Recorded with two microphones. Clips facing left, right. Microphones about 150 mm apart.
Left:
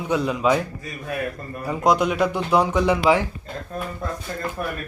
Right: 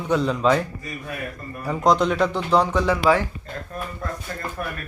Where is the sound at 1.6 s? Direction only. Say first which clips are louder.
Even; 5° left (ahead or behind).